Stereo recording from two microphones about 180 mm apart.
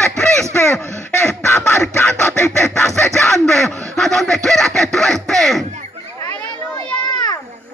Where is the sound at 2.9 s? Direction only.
Centre (ahead or behind).